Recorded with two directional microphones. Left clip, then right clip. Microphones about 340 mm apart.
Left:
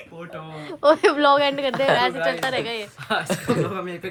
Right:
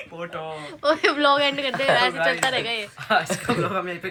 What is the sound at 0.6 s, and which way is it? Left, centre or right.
Speech, centre.